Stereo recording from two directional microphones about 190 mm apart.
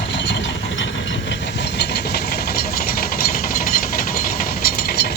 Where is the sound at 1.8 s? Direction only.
60° left (ahead or behind).